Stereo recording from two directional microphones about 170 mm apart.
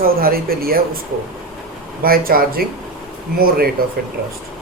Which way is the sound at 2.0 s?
60° right (ahead or behind).